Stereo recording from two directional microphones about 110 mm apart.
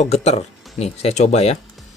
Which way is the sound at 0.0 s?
70° left (ahead or behind).